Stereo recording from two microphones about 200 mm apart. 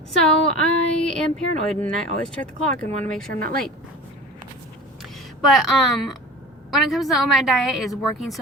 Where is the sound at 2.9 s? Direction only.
35° right (ahead or behind).